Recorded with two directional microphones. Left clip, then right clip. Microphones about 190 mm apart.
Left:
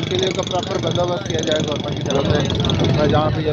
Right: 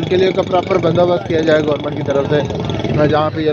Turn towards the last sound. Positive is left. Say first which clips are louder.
# right 4 dB
turn(degrees=-45)  # may be behind; listen again after turning